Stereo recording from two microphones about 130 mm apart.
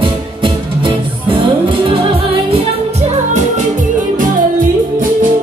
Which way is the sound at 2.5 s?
60° right (ahead or behind).